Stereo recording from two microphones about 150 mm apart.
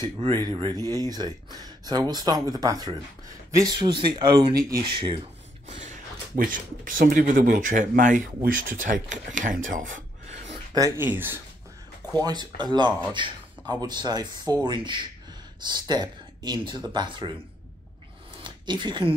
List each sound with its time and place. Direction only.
0.2 s speech: 30° right (ahead or behind)
5.8 s speech: 60° right (ahead or behind)
11.0 s speech: 15° right (ahead or behind)
12.2 s speech: 30° right (ahead or behind)
18.4 s a sound: 30° right (ahead or behind)